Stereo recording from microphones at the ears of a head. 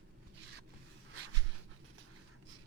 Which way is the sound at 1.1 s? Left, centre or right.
Right.